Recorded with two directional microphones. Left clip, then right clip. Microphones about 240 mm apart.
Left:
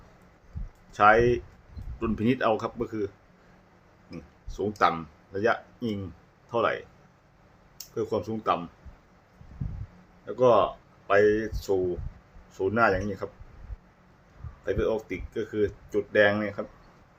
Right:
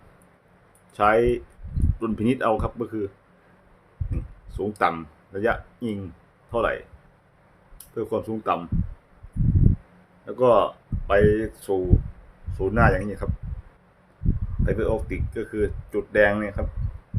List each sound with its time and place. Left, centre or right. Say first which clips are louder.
0.9 s speech: even; centre
4.1 s a sound: right 2 dB; centre
4.8 s speech: right 1 dB; centre
7.9 s speech: right 2 dB; centre
10.2 s speech: right 2 dB; centre
14.6 s speech: right 2 dB; centre